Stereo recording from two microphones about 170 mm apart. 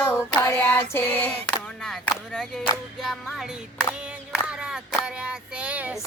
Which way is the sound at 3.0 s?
Centre (ahead or behind).